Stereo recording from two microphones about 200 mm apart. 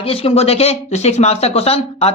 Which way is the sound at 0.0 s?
30° left (ahead or behind).